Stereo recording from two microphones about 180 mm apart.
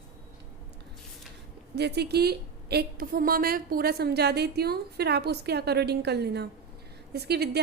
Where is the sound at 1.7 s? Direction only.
65° right (ahead or behind).